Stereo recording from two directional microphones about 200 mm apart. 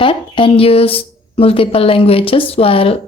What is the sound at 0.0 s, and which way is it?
Speech, 25° left (ahead or behind).